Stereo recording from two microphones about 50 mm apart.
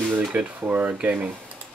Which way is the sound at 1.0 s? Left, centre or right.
Right.